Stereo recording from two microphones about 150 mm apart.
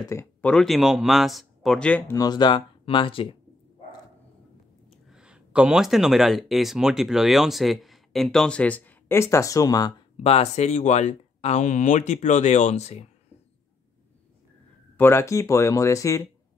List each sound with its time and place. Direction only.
0.1 s speech: 15° left (ahead or behind)
0.5 s speech: centre (ahead or behind)
2.1 s speech: 30° left (ahead or behind)
5.0 s speech: 5° right (ahead or behind); by 9.9 s 25° left (ahead or behind)
10.2 s speech: 45° left (ahead or behind)
15.0 s speech: 15° left (ahead or behind)